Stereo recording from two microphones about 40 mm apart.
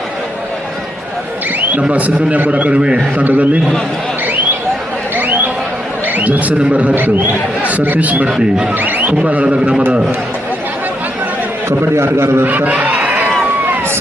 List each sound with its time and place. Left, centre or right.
1.9 s a man's voice: right
2.7 s a man's voice: right
3.2 s a man's voice: right
5.1 s a sound: right
6.1 s a man's voice: right
6.9 s a man's voice: right
7.6 s a man's voice: right
8.3 s a man's voice: centre
8.8 s a man's voice: right
9.2 s a man's voice: right
11.8 s a man's voice: right
12.5 s a man's voice: right